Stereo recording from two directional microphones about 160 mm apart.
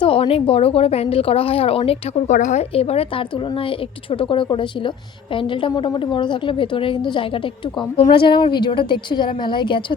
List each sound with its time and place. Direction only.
0.0 s speech: 35° left (ahead or behind)